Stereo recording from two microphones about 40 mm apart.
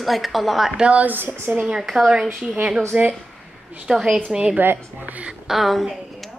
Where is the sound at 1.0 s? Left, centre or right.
Right.